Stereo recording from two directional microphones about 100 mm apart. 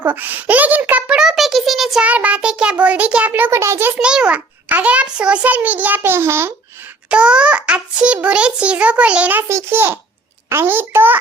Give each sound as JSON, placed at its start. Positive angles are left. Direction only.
{"t": 0.0, "sound": "a sound", "side_deg": -20}
{"t": 2.0, "sound": "a child's voice", "side_deg": -15}
{"t": 3.9, "sound": "a child's voice", "side_deg": -10}
{"t": 6.0, "sound": "a child's voice", "side_deg": -25}
{"t": 7.1, "sound": "a child's voice", "side_deg": -10}
{"t": 9.5, "sound": "a child's voice", "side_deg": -25}